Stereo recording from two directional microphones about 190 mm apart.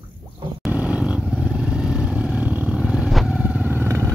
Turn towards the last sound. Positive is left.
turn(degrees=-15)  # may be behind; listen again after turning